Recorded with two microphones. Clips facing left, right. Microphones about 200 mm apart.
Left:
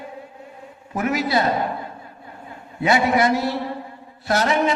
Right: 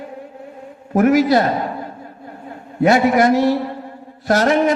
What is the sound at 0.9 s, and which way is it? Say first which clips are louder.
Speech: right 9 dB; 45° right (ahead or behind).